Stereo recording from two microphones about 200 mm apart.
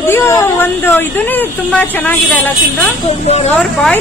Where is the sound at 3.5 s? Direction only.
5° left (ahead or behind).